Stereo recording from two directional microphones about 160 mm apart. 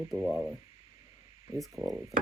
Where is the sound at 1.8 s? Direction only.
25° right (ahead or behind).